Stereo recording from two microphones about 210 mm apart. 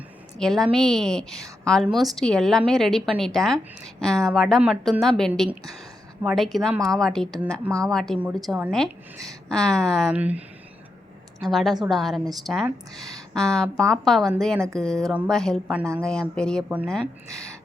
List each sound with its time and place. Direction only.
0.3 s a woman's voice: centre (ahead or behind)
6.7 s a woman's voice: 15° right (ahead or behind)
7.0 s a woman's voice: centre (ahead or behind)
13.0 s speech: 15° right (ahead or behind)
13.3 s a woman's voice: 5° left (ahead or behind)